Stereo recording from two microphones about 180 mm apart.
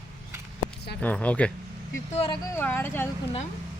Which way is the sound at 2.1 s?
30° left (ahead or behind).